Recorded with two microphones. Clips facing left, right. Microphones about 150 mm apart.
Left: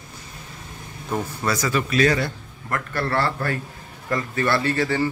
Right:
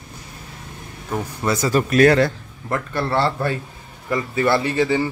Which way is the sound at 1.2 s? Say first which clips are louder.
Right 4 dB; 20° right (ahead or behind).